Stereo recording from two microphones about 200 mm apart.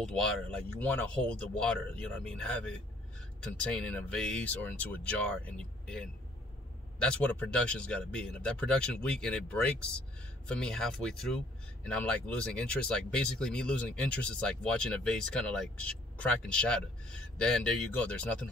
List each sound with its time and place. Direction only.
0.0 s speech: 5° left (ahead or behind)